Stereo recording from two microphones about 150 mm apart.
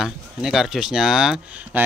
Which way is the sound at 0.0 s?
5° right (ahead or behind).